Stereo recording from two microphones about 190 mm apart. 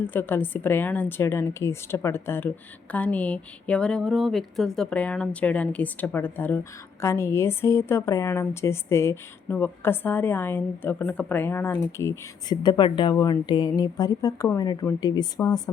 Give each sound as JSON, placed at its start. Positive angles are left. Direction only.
{"t": 0.1, "sound": "a woman's voice", "side_deg": 10}